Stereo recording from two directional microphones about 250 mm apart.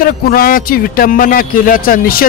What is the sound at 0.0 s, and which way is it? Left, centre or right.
A man's voice, left.